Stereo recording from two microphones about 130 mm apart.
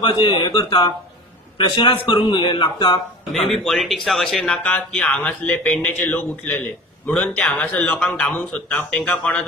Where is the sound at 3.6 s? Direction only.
Centre (ahead or behind).